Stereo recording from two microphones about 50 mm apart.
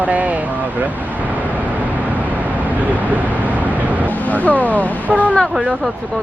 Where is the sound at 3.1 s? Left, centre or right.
Right.